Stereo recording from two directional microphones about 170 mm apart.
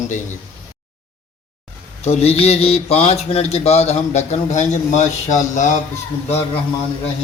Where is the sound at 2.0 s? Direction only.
40° left (ahead or behind).